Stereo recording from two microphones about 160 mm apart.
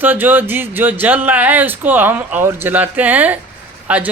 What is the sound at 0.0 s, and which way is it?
Speech, 10° right (ahead or behind).